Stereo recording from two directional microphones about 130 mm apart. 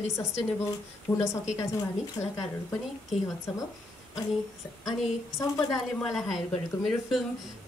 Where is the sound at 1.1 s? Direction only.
20° left (ahead or behind).